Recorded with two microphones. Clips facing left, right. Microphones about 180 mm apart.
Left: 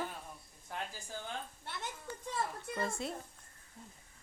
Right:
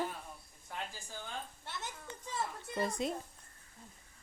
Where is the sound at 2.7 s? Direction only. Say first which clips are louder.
Right 4 dB; 20° right (ahead or behind).